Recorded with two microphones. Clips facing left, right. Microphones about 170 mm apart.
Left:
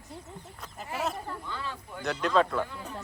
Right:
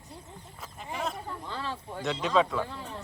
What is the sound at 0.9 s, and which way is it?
Speech, 5° left (ahead or behind).